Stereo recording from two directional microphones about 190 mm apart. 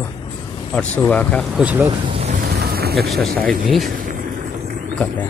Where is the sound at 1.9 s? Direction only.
30° right (ahead or behind).